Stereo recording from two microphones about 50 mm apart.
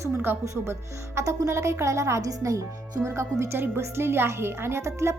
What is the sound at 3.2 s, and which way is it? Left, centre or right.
Speech, right.